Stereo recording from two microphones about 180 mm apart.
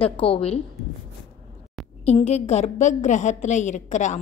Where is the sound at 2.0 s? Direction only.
35° left (ahead or behind).